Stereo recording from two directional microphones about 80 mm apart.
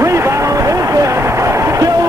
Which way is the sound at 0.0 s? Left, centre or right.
Right.